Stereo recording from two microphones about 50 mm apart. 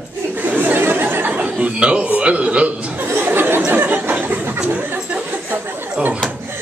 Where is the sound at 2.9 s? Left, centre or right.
Right.